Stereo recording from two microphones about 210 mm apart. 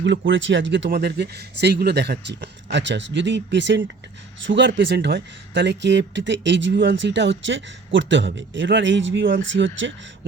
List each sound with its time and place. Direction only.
0.0 s speech: 60° right (ahead or behind)